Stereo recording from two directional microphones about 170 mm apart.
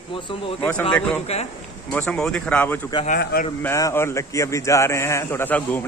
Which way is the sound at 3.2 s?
65° left (ahead or behind).